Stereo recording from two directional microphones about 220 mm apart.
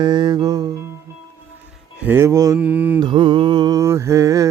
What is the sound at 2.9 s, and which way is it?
Mantra, 20° right (ahead or behind).